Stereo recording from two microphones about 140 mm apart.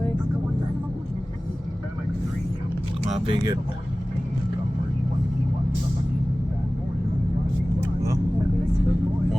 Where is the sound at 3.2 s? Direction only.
35° right (ahead or behind).